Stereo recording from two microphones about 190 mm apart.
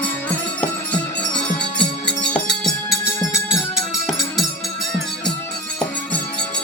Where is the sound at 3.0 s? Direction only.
15° left (ahead or behind).